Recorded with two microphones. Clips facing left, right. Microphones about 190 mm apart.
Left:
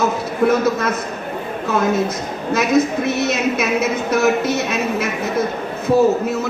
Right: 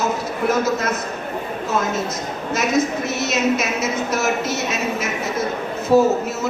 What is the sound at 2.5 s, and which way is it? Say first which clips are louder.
A man's voice: left 4 dB; 60° left (ahead or behind).